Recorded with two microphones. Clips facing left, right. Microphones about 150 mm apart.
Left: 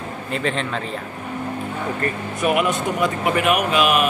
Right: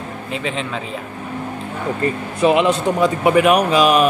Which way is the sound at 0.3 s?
Centre (ahead or behind).